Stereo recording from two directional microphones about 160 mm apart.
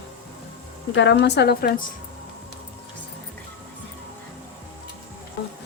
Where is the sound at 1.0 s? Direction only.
90° left; by 1.8 s 70° left (ahead or behind).